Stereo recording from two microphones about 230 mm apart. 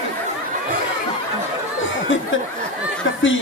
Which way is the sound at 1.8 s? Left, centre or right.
Left.